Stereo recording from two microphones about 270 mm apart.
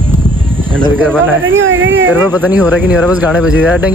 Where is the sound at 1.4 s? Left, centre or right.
Right.